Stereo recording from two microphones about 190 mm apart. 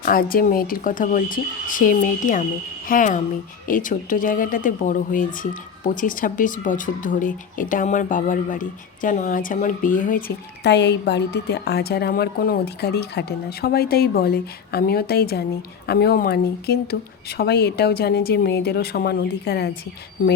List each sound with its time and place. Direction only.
0.0 s speech: 50° left (ahead or behind)